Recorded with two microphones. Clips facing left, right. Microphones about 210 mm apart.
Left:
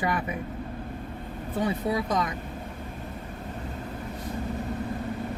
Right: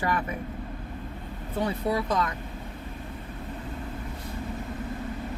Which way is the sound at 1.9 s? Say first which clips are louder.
Even; 15° left (ahead or behind).